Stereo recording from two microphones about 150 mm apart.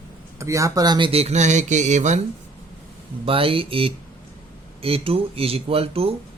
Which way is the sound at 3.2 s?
40° right (ahead or behind).